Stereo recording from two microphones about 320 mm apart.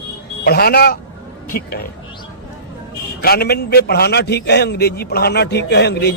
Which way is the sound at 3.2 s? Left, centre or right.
Left.